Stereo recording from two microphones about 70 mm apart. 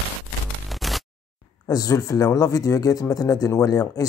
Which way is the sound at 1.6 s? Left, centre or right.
Left.